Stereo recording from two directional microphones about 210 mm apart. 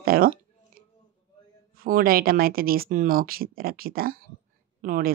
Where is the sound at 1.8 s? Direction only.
45° right (ahead or behind).